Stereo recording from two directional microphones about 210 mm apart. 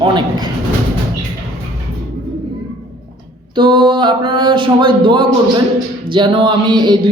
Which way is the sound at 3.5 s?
25° right (ahead or behind).